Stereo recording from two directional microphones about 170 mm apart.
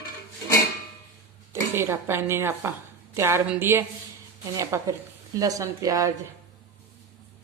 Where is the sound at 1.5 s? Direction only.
15° right (ahead or behind).